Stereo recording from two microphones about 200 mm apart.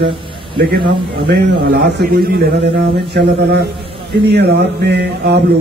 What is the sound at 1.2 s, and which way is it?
A man's voice, 55° right (ahead or behind).